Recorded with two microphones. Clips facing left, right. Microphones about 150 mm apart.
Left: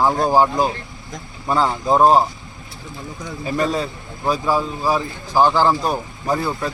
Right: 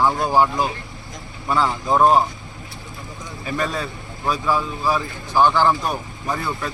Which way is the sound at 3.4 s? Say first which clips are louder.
Left 4 dB; 30° left (ahead or behind).